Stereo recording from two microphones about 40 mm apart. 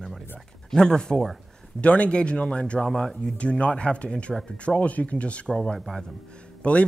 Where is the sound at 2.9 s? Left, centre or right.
Centre.